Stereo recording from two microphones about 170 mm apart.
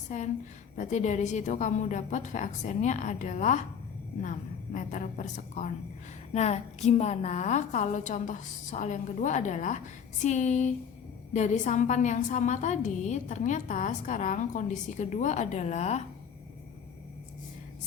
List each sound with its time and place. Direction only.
0.1 s a woman's voice: 45° left (ahead or behind)